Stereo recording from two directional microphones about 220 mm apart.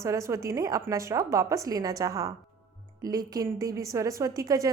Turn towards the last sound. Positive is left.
turn(degrees=-15)  # may be behind; listen again after turning